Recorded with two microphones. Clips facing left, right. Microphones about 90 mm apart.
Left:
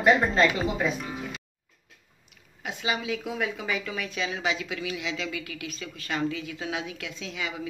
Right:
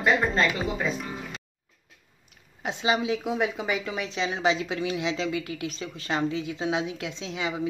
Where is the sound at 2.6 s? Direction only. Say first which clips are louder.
Right 5 dB; 25° right (ahead or behind).